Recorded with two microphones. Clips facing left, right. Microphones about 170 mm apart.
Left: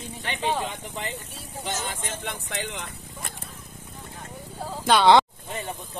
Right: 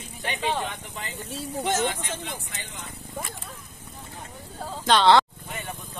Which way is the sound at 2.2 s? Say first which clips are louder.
Left 5 dB; 75° left (ahead or behind).